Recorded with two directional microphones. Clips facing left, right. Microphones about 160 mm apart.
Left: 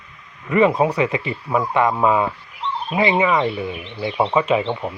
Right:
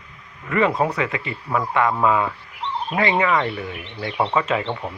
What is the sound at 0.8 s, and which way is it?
Speech, 15° left (ahead or behind).